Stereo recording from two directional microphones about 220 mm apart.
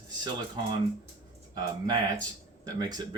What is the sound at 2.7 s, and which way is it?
Speech, 20° right (ahead or behind).